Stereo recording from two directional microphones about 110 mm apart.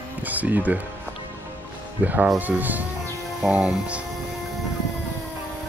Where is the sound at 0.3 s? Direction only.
15° right (ahead or behind).